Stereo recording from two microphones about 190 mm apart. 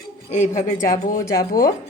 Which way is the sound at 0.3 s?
40° left (ahead or behind).